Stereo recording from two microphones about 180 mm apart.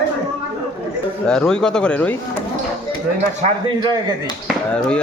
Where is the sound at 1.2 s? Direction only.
5° left (ahead or behind).